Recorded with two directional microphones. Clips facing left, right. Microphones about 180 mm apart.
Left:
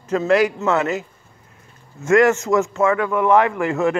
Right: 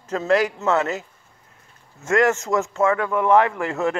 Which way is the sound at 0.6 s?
35° right (ahead or behind).